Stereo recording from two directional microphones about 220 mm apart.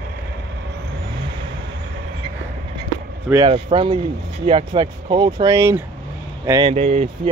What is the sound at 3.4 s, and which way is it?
Speech, 25° right (ahead or behind).